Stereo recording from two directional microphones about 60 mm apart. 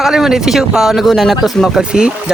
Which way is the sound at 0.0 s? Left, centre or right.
Centre.